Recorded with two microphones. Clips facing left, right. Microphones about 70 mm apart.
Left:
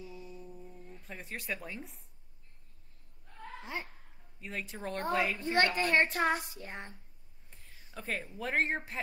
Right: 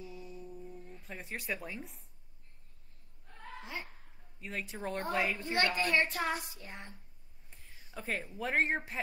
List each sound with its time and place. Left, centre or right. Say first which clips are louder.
0.4 s humming: right 2 dB; centre
0.9 s speech: left 1 dB; centre
3.6 s speech: left 3 dB; left
4.4 s speech: even; centre
5.4 s speech: left 3 dB; left
7.9 s a woman's voice: even; centre